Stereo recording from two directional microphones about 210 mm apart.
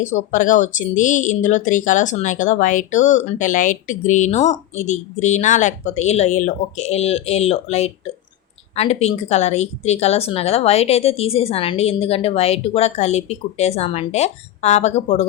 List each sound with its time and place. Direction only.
0.0 s speech: 35° left (ahead or behind)